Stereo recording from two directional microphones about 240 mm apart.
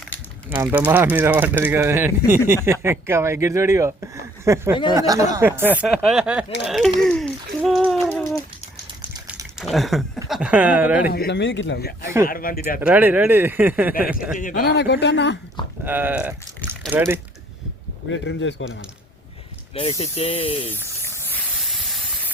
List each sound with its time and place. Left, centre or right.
0.5 s speech: centre
9.0 s a sound: centre
9.6 s speech: centre
11.1 s speech: left
12.8 s speech: centre
14.3 s speech: left
15.8 s speech: centre
18.1 s speech: left
19.7 s speech: left
21.0 s snake: centre
21.6 s steam: centre